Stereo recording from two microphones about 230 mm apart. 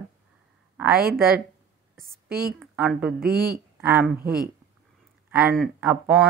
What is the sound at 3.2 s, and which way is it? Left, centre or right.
Speech, right.